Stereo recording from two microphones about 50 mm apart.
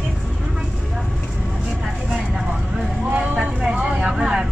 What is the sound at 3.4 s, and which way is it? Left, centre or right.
Vehicle, right.